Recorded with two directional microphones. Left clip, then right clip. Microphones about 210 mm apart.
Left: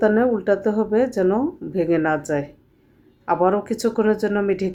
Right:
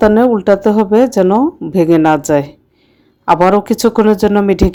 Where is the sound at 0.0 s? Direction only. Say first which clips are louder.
Right 8 dB; 35° right (ahead or behind).